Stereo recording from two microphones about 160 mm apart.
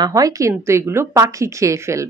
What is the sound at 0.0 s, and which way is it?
Speech, 20° right (ahead or behind).